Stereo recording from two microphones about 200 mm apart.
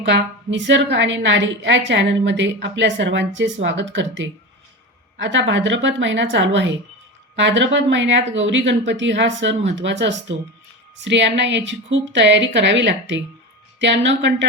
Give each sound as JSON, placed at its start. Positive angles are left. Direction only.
{"t": 0.0, "sound": "a woman's voice", "side_deg": -65}